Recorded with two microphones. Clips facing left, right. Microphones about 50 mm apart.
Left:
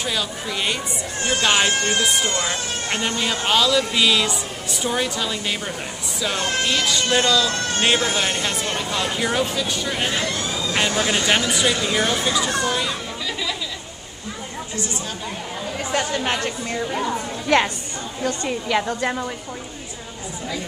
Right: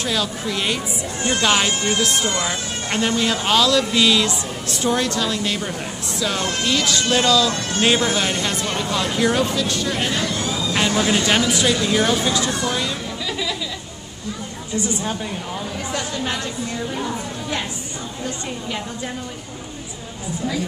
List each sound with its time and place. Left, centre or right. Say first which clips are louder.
0.0 s speech: right 2 dB; centre
15.9 s speech: left 4 dB; left
17.5 s a woman's voice: left 10 dB; left
18.2 s a woman's voice: left 5 dB; left